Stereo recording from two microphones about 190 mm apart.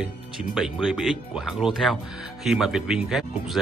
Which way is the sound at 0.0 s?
Centre (ahead or behind).